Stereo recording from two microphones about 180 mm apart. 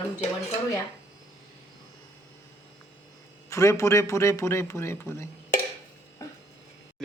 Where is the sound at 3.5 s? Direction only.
15° left (ahead or behind).